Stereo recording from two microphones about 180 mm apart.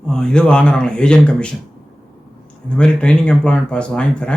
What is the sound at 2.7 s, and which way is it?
A man's voice, 5° left (ahead or behind).